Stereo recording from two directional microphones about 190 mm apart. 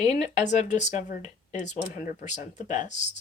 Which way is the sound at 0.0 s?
35° left (ahead or behind).